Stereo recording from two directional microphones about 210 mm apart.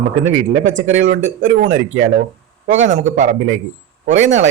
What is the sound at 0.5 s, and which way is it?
Speech, 40° right (ahead or behind).